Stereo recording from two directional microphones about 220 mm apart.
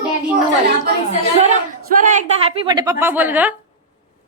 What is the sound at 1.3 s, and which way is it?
A woman's voice, 30° right (ahead or behind).